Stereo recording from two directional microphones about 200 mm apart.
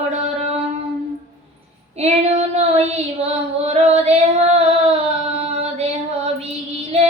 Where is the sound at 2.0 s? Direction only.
35° right (ahead or behind).